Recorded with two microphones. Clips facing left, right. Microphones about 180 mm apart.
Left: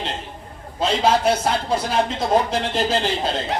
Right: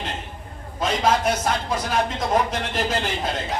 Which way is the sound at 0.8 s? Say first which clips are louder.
Left 3 dB; 30° left (ahead or behind).